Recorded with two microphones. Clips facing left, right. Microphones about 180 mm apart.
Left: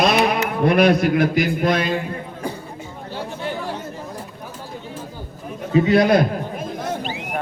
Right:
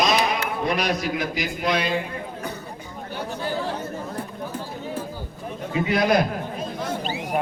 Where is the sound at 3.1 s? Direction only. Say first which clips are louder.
Left 1 dB; 25° left (ahead or behind).